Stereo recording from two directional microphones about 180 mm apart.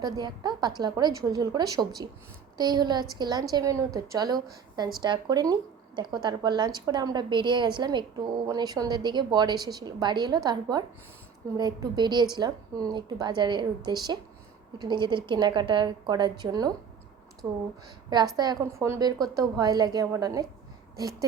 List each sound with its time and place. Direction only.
0.0 s a woman's voice: 25° right (ahead or behind)